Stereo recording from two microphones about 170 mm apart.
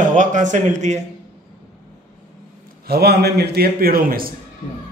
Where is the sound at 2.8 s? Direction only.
70° right (ahead or behind).